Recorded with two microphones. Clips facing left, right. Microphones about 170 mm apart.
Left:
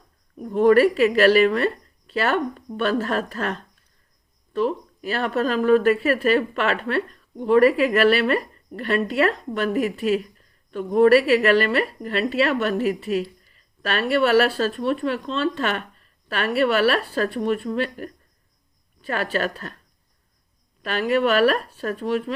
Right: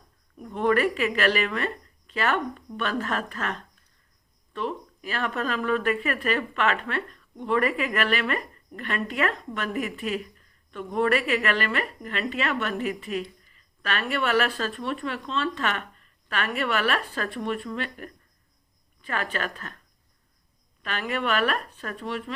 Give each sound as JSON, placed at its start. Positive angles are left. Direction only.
{"t": 0.3, "sound": "a woman's voice", "side_deg": 40}
{"t": 20.8, "sound": "a woman's voice", "side_deg": 35}